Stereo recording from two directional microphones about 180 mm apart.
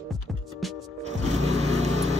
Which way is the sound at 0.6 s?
Centre (ahead or behind).